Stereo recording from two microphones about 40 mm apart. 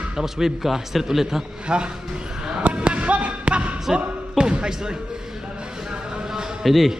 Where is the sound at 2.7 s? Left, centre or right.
Right.